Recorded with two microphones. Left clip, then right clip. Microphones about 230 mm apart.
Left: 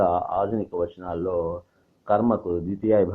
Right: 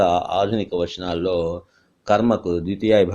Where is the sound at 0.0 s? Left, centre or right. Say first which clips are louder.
Right 4 dB; right.